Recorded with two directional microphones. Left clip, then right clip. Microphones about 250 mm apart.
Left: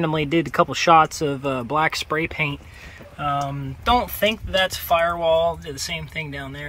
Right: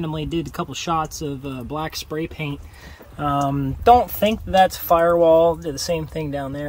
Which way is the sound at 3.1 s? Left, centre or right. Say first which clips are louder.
Right 3 dB; right.